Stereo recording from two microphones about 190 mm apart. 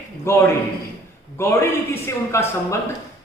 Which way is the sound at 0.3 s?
15° left (ahead or behind).